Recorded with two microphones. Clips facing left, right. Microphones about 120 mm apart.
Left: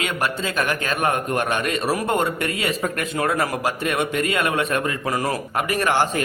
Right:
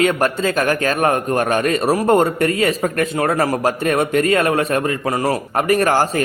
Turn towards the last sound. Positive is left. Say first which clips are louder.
# right 5 dB
turn(degrees=-40)  # may be behind; listen again after turning